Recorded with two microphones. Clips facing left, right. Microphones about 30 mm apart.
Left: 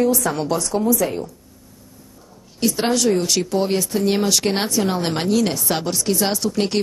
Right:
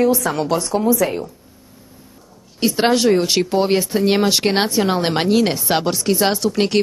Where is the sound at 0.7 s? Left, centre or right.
Right.